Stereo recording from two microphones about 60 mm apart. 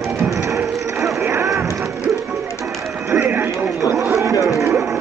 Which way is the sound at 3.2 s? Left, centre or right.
Right.